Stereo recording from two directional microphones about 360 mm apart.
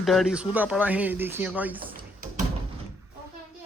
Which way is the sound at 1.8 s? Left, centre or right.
Right.